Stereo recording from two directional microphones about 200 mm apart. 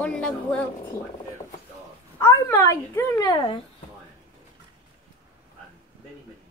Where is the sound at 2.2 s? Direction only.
15° left (ahead or behind).